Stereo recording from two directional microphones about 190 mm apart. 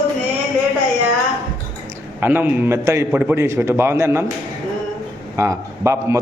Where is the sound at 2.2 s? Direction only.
10° right (ahead or behind).